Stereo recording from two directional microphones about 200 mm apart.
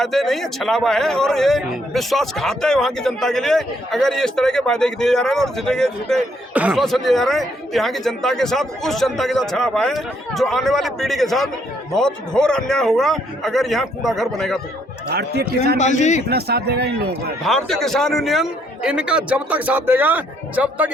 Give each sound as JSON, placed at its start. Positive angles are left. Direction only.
{"t": 0.0, "sound": "a man's voice", "side_deg": 0}
{"t": 15.1, "sound": "speech", "side_deg": -55}
{"t": 15.8, "sound": "a man's voice", "side_deg": 35}
{"t": 16.3, "sound": "speech", "side_deg": -50}
{"t": 17.7, "sound": "a man's voice", "side_deg": 0}